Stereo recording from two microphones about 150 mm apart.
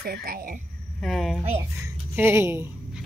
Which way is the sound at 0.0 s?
90° right.